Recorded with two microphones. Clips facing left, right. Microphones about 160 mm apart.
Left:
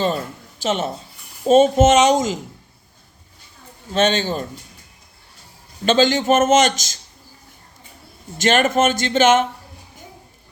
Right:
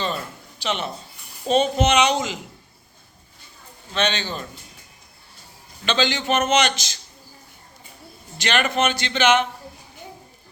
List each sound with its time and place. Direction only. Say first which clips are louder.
0.6 s a man's voice: left 5 dB; 45° left (ahead or behind)
3.9 s a man's voice: left 6 dB; 45° left (ahead or behind)
5.8 s a man's voice: left 7 dB; 45° left (ahead or behind)
8.4 s a man's voice: left 5 dB; 45° left (ahead or behind)